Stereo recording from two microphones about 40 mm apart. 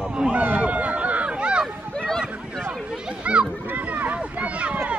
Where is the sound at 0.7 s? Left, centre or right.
Right.